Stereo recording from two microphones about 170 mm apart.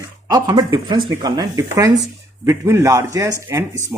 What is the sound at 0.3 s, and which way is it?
A man's voice, 25° right (ahead or behind).